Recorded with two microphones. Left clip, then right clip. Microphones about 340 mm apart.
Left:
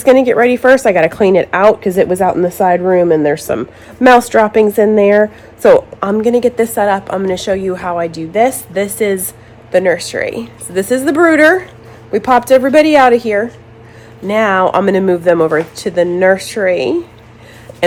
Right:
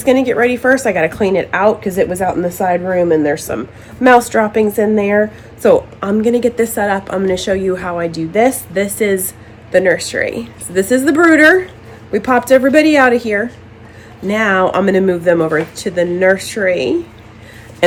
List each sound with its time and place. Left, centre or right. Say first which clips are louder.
0.0 s a woman's voice: left 4 dB; left